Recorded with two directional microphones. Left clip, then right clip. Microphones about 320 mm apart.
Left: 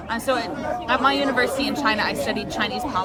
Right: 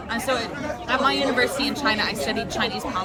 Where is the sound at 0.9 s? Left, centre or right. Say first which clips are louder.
Left 1 dB; centre.